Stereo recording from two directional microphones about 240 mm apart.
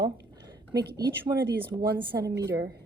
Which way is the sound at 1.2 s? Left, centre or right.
Centre.